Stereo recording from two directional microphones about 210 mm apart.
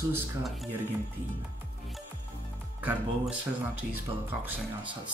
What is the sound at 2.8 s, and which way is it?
Speech, 5° right (ahead or behind).